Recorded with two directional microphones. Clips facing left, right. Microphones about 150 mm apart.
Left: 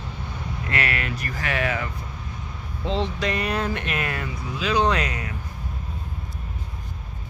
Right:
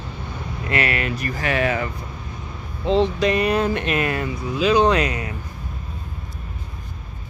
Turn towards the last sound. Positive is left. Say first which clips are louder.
# right 5 dB
turn(degrees=-20)  # may be behind; listen again after turning